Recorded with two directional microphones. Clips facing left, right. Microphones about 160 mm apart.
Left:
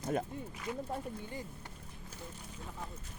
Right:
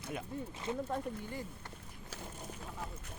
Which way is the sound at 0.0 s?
45° left (ahead or behind).